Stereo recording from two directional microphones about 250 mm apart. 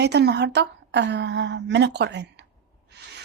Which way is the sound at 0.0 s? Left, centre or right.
Right.